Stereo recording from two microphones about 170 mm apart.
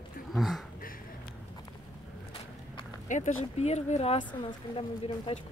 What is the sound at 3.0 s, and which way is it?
Speech, 45° left (ahead or behind).